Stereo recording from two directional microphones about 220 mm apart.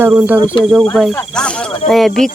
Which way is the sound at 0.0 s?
10° right (ahead or behind).